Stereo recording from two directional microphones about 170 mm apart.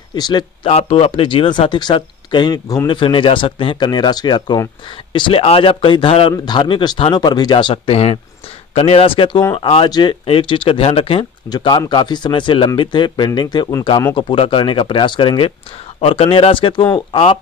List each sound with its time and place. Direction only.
0.1 s speech: 25° left (ahead or behind)
9.4 s speech: 20° left (ahead or behind)